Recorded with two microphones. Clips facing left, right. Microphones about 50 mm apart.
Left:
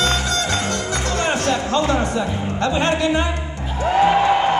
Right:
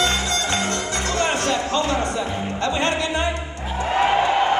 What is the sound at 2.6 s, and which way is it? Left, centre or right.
Speech, left.